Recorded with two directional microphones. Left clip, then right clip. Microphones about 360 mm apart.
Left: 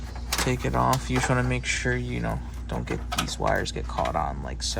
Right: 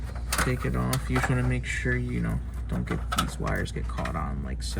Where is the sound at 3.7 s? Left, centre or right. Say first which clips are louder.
Left 7 dB; left.